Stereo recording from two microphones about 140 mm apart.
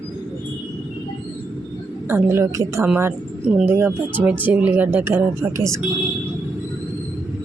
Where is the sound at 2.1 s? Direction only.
15° right (ahead or behind).